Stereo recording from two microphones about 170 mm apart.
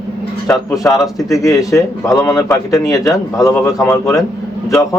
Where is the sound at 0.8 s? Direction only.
20° left (ahead or behind).